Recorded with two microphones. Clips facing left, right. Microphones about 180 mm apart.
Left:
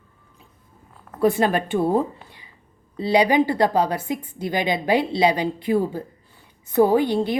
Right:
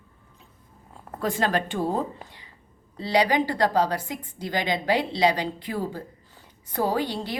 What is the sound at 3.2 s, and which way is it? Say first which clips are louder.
A woman's voice: left 5 dB; 15° left (ahead or behind).